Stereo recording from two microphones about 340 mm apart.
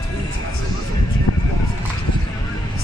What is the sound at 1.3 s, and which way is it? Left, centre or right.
Speech, left.